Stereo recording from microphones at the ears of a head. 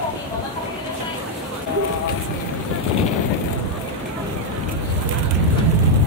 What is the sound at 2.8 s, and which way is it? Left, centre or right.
Vehicle, left.